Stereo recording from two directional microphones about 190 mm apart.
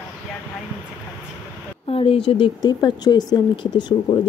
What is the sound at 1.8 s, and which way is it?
Speech, 30° left (ahead or behind).